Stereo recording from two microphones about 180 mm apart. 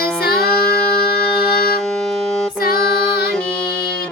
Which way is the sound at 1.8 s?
Centre (ahead or behind).